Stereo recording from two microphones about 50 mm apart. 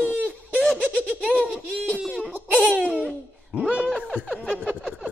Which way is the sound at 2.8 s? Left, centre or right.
Right.